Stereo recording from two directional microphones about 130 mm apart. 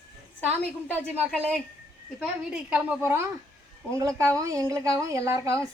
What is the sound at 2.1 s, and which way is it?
A woman's voice, 5° right (ahead or behind).